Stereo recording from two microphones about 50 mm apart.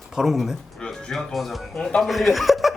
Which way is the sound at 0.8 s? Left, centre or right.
Centre.